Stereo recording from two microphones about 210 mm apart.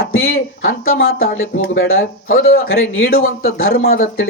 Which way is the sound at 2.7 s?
70° left (ahead or behind).